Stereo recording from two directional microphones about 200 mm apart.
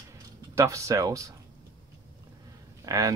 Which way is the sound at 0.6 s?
15° right (ahead or behind).